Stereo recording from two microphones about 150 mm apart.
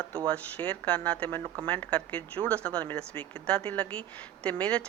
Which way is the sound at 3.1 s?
35° right (ahead or behind).